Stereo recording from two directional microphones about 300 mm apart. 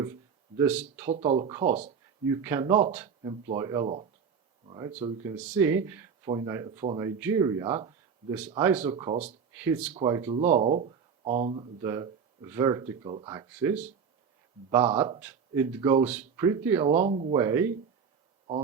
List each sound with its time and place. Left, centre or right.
0.0 s a sound: centre
1.1 s speech: right
2.2 s speech: centre
9.5 s speech: centre
10.3 s speech: right
17.3 s speech: centre